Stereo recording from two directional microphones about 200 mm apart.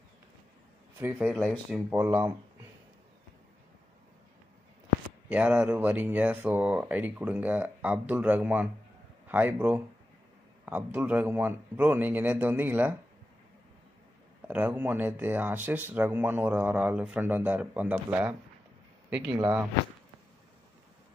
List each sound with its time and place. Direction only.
0.9 s speech: 10° right (ahead or behind)
5.3 s speech: 5° right (ahead or behind)
14.5 s speech: 10° right (ahead or behind)
19.3 s speech: 20° right (ahead or behind)